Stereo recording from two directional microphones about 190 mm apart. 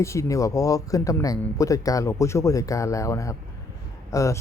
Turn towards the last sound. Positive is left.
turn(degrees=15)  # may be behind; listen again after turning